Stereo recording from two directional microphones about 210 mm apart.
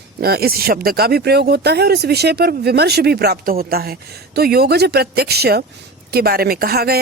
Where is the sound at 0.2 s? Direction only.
45° right (ahead or behind).